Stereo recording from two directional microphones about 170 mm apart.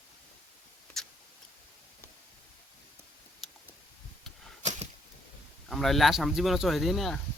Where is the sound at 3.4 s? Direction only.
Centre (ahead or behind).